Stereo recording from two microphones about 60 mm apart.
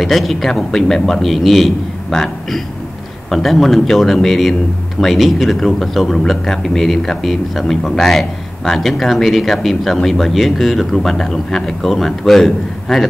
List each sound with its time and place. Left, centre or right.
0.0 s speech: centre